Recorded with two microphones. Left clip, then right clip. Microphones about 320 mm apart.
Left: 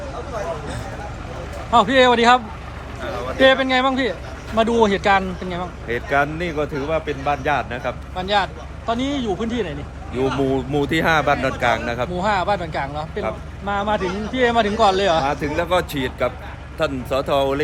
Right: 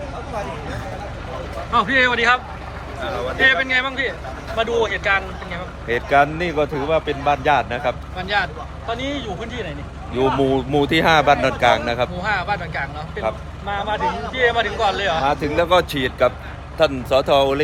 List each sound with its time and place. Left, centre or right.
1.7 s speech: centre
3.4 s a man's voice: centre
5.9 s speech: centre
8.1 s a man's voice: centre
10.2 s speech: centre
12.2 s a man's voice: centre
15.2 s speech: centre